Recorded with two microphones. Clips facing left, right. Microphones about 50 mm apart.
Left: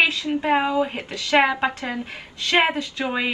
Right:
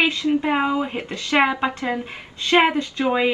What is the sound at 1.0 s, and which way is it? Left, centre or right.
A woman's voice, right.